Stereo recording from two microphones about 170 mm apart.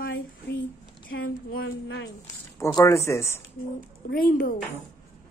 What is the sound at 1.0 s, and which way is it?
Speech, 60° left (ahead or behind).